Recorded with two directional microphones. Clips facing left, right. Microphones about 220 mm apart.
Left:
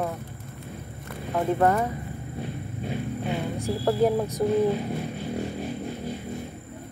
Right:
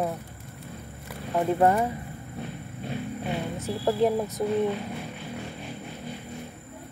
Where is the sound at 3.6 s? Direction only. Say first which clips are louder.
Left 1 dB; centre (ahead or behind).